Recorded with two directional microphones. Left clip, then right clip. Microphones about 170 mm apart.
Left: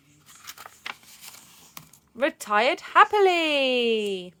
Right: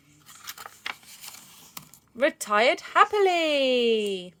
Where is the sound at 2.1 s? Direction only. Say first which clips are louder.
Even; 10° left (ahead or behind).